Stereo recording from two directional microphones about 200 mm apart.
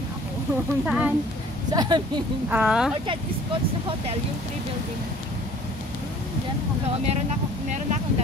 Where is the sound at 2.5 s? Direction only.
5° right (ahead or behind).